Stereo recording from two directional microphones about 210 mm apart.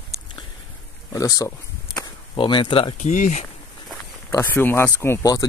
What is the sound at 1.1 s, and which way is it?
Speech, 15° left (ahead or behind).